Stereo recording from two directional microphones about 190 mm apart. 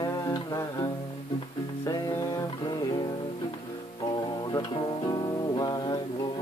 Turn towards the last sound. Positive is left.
turn(degrees=20)  # may be behind; listen again after turning